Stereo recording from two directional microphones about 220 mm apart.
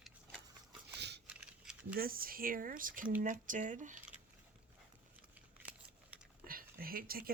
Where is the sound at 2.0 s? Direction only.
40° right (ahead or behind).